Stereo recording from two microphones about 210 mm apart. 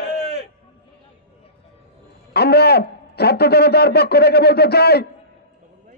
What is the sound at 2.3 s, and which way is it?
A man's voice, 50° left (ahead or behind).